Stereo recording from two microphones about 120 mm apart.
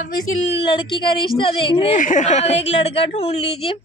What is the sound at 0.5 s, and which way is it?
Speech, 45° left (ahead or behind).